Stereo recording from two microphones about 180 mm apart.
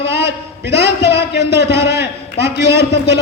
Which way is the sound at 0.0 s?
70° left (ahead or behind).